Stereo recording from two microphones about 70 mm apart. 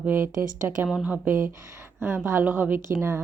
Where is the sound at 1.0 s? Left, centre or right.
Right.